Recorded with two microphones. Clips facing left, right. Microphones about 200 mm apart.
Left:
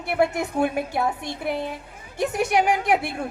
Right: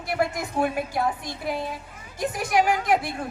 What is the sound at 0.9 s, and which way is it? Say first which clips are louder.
Speech: left 1 dB; 65° left (ahead or behind).